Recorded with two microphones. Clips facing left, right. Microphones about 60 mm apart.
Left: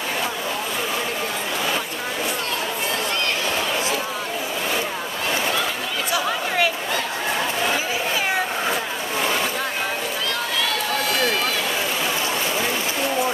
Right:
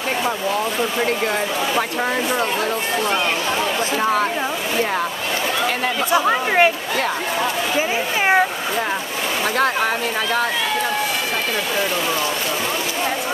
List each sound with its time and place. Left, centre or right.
6.1 s chatter: right